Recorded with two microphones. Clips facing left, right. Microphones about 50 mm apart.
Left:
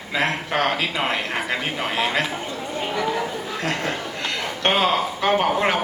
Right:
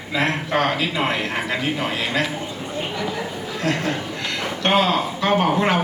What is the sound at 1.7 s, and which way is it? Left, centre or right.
Speech, left.